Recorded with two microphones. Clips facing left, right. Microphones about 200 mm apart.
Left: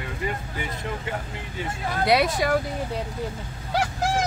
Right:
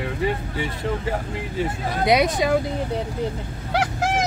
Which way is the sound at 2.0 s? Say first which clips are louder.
Right 2 dB; 20° right (ahead or behind).